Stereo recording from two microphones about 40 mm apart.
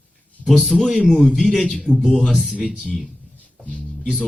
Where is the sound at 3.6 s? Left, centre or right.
Left.